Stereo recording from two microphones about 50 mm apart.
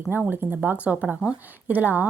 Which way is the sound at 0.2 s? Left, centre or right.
Right.